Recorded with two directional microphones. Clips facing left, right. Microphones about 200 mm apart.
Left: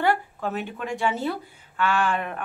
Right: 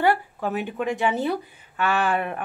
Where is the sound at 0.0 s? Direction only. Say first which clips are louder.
Right 2 dB; 10° right (ahead or behind).